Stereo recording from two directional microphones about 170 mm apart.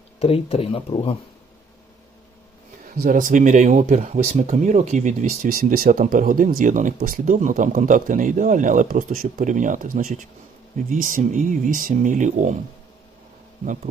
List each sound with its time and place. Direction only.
0.2 s speech: 35° left (ahead or behind)
3.0 s speech: 50° right (ahead or behind)